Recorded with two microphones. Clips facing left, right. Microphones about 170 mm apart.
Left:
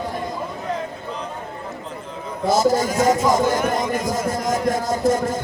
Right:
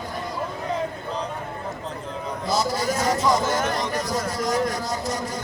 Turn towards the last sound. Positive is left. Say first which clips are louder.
# left 8 dB
turn(degrees=50)  # may be behind; listen again after turning